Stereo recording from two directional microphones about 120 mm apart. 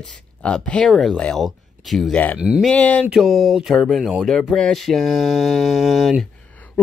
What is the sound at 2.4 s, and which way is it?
Speech, 10° right (ahead or behind).